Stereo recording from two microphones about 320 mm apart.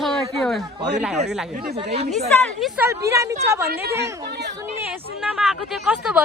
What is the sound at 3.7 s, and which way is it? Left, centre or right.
Speech, right.